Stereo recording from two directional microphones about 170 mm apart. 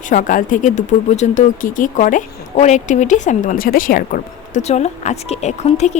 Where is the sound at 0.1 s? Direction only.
50° left (ahead or behind).